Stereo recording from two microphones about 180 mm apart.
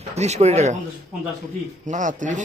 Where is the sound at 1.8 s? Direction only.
45° right (ahead or behind).